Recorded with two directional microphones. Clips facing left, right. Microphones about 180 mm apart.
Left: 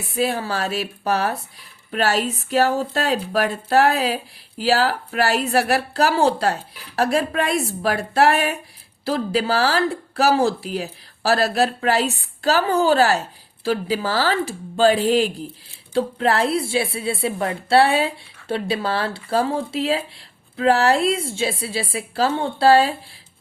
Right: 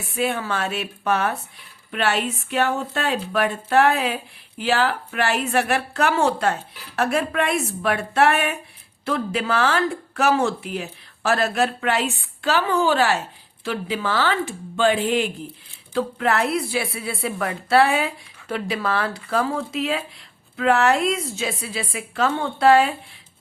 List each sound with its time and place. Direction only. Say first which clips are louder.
0.0 s a woman's voice: left 2 dB; 35° left (ahead or behind)